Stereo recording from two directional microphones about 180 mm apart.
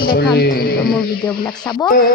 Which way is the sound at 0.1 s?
60° left (ahead or behind).